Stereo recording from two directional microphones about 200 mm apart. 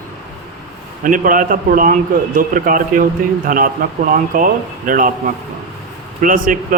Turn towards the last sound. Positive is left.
turn(degrees=-40)  # may be behind; listen again after turning